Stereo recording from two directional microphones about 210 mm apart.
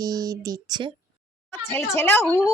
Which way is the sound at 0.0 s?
20° right (ahead or behind).